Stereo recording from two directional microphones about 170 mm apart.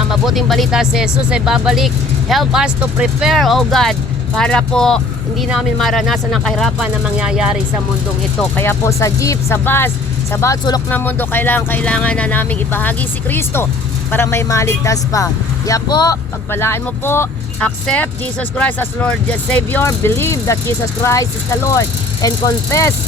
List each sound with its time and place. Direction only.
0.1 s speech: centre (ahead or behind)
8.4 s speech: 10° left (ahead or behind)